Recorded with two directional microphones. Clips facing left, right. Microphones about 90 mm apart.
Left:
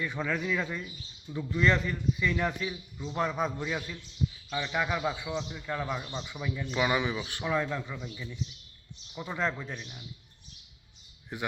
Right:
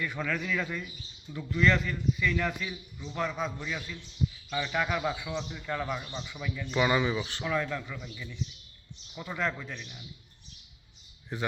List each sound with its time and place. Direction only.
0.0 s a man's voice: 20° left (ahead or behind)
3.6 s a man's voice: 30° left (ahead or behind)
4.5 s a man's voice: 15° left (ahead or behind)
6.7 s a man's voice: 5° left (ahead or behind)
11.3 s a man's voice: 15° left (ahead or behind)